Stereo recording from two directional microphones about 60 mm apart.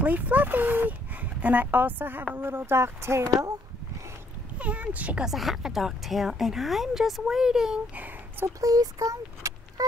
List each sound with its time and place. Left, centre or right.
0.0 s a woman's voice: right
4.6 s speech: right
5.2 s a woman's voice: centre
7.9 s a sound: right
8.5 s speech: right